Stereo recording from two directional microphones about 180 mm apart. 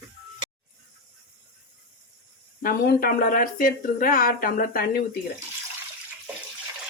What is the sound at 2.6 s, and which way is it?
Speech, 55° left (ahead or behind).